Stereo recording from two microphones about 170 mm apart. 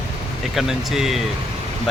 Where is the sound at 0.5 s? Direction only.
Centre (ahead or behind).